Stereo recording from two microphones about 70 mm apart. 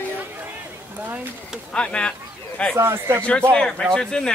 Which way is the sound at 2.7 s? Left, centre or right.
Right.